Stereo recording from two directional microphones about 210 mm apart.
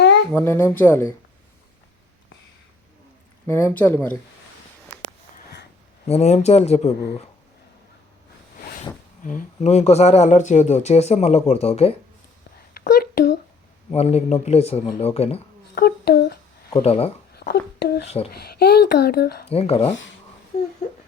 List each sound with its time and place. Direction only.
0.3 s speech: 10° left (ahead or behind)
3.4 s speech: 10° left (ahead or behind)
5.3 s a sound: 50° left (ahead or behind)
6.1 s speech: 30° left (ahead or behind)
9.2 s speech: 40° left (ahead or behind)
12.7 s a sound: 45° left (ahead or behind)
13.9 s a man's voice: 30° left (ahead or behind)
15.7 s a sound: 50° left (ahead or behind)
16.6 s speech: 25° left (ahead or behind)
17.3 s speech: 50° left (ahead or behind)
19.5 s a man's voice: 30° left (ahead or behind)